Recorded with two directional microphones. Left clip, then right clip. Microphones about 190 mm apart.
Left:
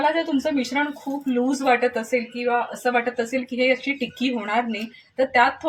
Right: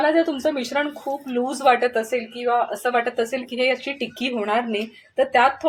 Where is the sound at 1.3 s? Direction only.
45° right (ahead or behind).